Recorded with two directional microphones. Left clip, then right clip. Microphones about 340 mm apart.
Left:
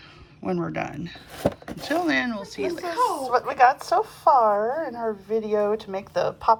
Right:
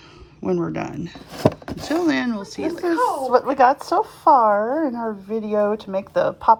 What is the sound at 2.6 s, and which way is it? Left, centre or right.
A woman's voice, centre.